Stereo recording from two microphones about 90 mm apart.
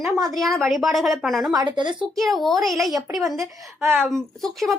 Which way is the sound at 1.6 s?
60° right (ahead or behind).